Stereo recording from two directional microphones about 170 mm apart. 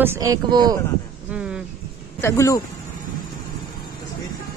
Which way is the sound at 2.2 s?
15° left (ahead or behind).